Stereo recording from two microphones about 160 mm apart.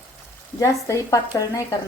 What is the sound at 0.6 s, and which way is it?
Speech, 20° left (ahead or behind).